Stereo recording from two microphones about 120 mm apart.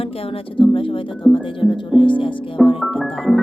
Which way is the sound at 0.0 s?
50° left (ahead or behind).